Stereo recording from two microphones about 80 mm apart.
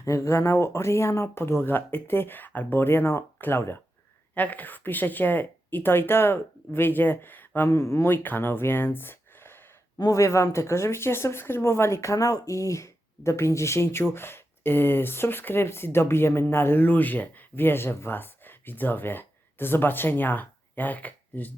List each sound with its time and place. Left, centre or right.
0.0 s speech: left
4.4 s speech: centre
7.7 s speech: left